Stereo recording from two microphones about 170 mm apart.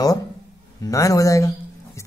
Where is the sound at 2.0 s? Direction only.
15° left (ahead or behind).